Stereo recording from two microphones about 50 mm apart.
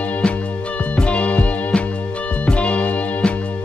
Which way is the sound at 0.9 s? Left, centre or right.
Left.